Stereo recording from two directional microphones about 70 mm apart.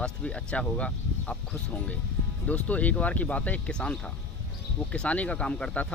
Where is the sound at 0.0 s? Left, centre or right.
Centre.